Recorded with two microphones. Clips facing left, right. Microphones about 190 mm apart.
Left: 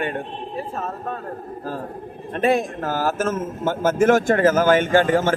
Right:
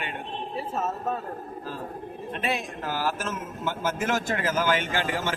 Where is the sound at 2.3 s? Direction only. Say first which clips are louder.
Left 11 dB; 50° left (ahead or behind).